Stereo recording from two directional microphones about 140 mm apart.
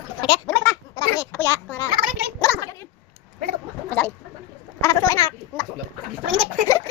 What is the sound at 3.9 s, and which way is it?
Chicken, 10° left (ahead or behind).